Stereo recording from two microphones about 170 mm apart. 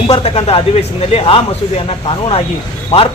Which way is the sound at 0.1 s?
30° left (ahead or behind).